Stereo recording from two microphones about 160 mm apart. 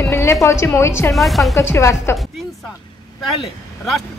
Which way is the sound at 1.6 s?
15° left (ahead or behind).